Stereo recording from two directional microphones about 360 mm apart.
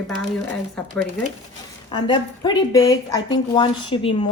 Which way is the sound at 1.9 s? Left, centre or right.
Centre.